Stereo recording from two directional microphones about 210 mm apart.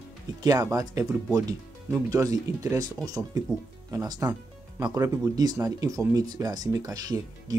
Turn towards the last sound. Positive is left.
turn(degrees=-15)  # may be behind; listen again after turning